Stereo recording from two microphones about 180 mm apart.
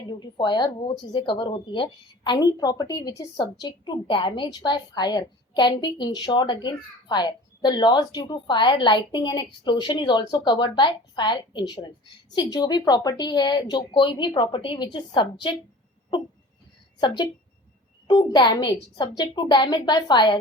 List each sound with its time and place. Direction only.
0.1 s a child's voice: 25° left (ahead or behind)
18.1 s a child's voice: 25° left (ahead or behind)